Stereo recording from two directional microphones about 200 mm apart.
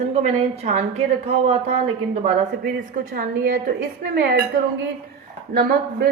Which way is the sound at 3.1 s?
50° right (ahead or behind).